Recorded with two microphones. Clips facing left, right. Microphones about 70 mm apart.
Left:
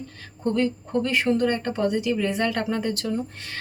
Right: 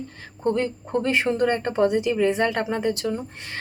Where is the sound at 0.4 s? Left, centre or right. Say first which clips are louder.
Even; right.